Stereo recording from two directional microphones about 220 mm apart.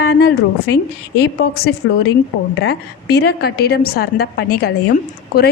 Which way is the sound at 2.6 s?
50° left (ahead or behind).